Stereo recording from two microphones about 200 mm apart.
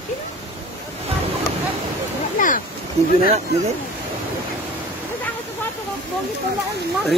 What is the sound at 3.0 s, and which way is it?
Speech, 35° right (ahead or behind).